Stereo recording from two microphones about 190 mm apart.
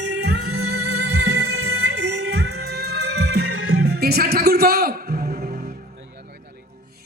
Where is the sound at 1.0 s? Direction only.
60° right (ahead or behind); by 5.6 s 45° right (ahead or behind).